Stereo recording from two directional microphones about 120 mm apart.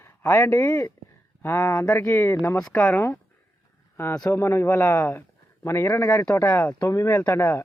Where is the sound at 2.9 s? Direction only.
20° left (ahead or behind).